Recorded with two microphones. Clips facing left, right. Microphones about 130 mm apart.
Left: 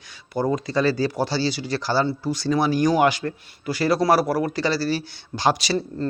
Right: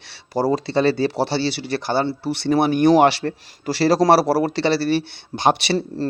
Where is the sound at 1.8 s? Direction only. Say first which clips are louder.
Right 1 dB; 25° right (ahead or behind).